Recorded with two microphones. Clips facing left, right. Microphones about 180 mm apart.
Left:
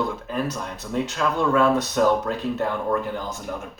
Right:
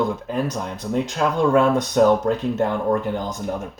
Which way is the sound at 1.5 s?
20° right (ahead or behind).